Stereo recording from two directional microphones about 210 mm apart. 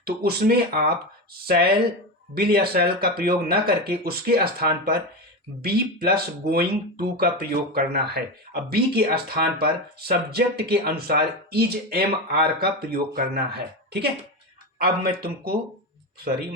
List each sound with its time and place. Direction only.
0.0 s speech: 50° right (ahead or behind)